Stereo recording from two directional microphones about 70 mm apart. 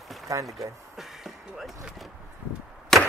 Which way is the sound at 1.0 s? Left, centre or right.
Centre.